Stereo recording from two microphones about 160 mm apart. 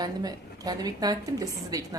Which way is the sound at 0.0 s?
25° right (ahead or behind).